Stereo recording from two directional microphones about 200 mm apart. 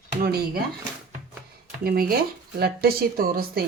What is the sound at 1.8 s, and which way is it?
Speech, 50° right (ahead or behind).